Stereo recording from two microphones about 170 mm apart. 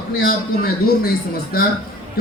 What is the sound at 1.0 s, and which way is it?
Speech, 60° left (ahead or behind).